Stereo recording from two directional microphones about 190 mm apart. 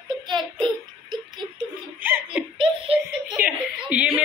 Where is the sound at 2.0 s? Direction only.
10° right (ahead or behind).